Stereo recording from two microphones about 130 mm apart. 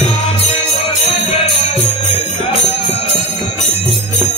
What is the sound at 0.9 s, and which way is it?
Jingle bell, 55° left (ahead or behind).